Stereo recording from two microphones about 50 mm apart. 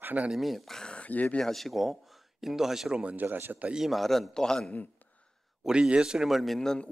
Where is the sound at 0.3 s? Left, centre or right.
Centre.